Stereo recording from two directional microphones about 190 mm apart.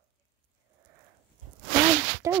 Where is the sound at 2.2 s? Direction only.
15° right (ahead or behind).